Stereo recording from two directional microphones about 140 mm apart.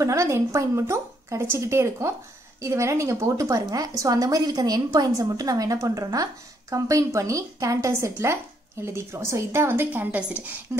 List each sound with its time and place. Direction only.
0.0 s a woman's voice: 20° right (ahead or behind)